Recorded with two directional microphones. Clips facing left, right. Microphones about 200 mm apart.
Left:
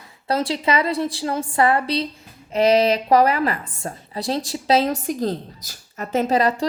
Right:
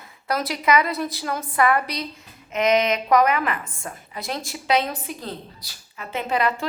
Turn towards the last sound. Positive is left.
turn(degrees=35)  # may be behind; listen again after turning